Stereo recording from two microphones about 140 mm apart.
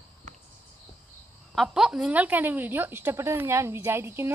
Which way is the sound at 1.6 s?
5° right (ahead or behind).